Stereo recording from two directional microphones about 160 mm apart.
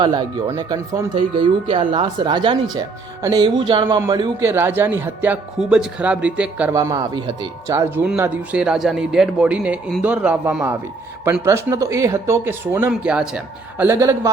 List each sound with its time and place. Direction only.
0.0 s speech: 25° right (ahead or behind); by 6.7 s 10° right (ahead or behind)
6.7 s speech: 20° right (ahead or behind)